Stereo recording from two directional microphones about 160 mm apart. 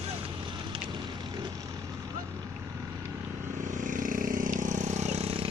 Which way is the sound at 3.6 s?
55° right (ahead or behind).